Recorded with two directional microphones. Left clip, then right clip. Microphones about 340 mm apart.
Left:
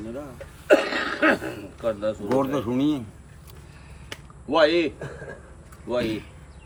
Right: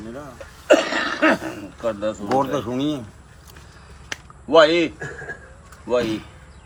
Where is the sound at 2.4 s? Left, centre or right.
Centre.